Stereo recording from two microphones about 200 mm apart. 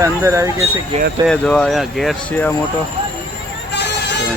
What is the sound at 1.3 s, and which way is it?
Speech, 5° left (ahead or behind).